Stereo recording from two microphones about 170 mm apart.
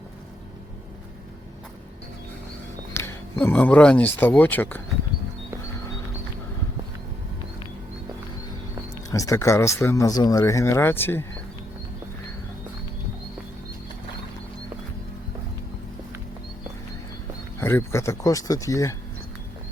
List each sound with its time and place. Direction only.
2.9 s speech: 15° left (ahead or behind)
9.0 s speech: 20° left (ahead or behind)
17.6 s speech: 15° left (ahead or behind)